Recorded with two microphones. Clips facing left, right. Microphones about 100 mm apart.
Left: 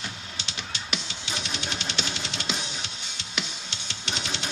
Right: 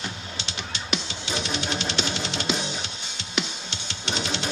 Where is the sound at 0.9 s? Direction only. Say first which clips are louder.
Right 6 dB; 25° right (ahead or behind).